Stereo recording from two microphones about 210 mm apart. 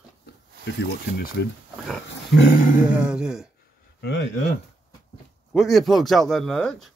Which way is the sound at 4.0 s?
55° left (ahead or behind).